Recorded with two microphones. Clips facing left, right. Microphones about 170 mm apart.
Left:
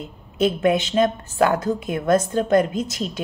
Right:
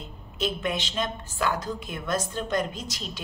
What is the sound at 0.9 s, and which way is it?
A woman's voice, 55° left (ahead or behind).